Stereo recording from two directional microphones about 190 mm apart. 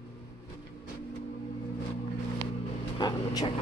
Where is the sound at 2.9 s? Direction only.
20° left (ahead or behind).